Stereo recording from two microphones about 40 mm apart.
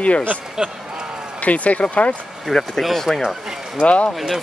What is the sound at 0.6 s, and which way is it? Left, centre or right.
Speech, centre.